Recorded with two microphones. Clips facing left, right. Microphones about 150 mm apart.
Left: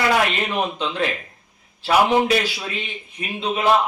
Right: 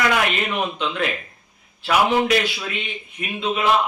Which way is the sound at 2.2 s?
35° left (ahead or behind).